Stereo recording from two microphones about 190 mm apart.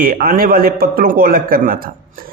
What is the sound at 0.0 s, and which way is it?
Speech, 50° right (ahead or behind).